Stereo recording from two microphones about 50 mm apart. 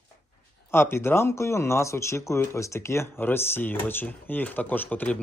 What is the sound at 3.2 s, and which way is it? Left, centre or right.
Speech, left.